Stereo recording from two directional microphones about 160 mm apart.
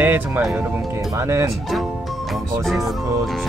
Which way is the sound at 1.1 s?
20° right (ahead or behind).